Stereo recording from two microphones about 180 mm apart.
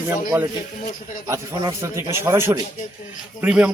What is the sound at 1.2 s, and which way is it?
A man's voice, 15° right (ahead or behind).